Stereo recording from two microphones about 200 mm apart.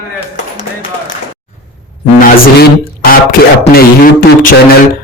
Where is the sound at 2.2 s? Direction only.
45° left (ahead or behind).